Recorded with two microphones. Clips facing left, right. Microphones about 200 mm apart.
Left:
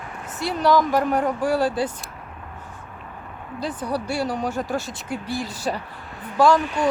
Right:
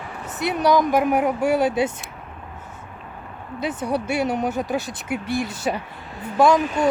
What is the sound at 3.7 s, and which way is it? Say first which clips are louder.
Speech: right 3 dB; 25° right (ahead or behind).